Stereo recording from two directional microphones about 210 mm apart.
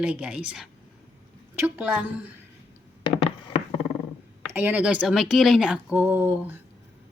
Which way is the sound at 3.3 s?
30° left (ahead or behind).